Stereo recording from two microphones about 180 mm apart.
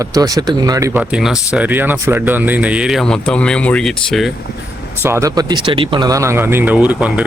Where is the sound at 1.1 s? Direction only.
5° right (ahead or behind).